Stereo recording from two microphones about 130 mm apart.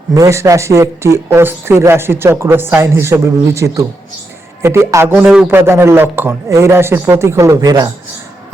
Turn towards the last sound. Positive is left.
turn(degrees=-30)  # may be behind; listen again after turning